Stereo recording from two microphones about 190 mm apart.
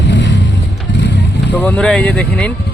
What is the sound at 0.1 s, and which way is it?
Vehicle, 70° left (ahead or behind).